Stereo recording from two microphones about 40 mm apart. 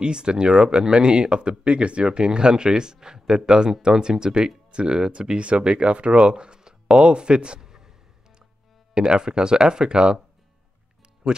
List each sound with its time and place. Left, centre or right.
0.0 s speech: right
8.9 s speech: right
11.2 s speech: centre